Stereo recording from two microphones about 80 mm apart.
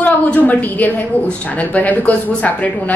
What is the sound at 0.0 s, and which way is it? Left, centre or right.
A woman's voice, centre.